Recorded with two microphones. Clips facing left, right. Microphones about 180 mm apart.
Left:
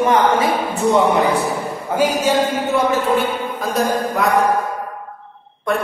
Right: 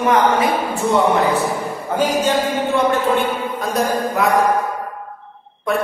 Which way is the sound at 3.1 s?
Centre (ahead or behind).